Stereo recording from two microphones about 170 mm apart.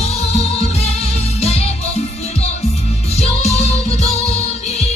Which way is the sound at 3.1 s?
40° left (ahead or behind).